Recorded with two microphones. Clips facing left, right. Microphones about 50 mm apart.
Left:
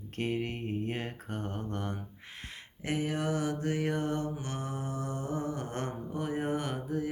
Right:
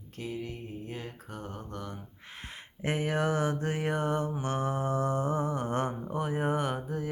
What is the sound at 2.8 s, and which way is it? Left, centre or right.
Mantra, right.